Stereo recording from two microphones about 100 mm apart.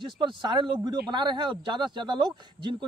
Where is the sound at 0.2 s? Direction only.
50° right (ahead or behind).